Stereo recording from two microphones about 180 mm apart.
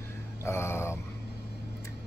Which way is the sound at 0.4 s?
15° left (ahead or behind).